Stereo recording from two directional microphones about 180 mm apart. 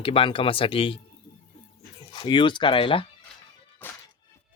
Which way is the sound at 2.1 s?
25° left (ahead or behind).